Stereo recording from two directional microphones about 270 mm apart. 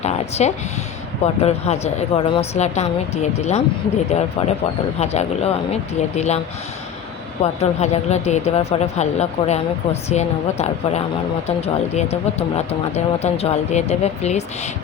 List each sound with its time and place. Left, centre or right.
0.0 s speech: left
7.4 s speech: left